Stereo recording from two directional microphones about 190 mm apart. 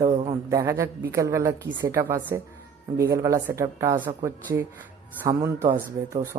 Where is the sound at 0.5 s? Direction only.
15° right (ahead or behind).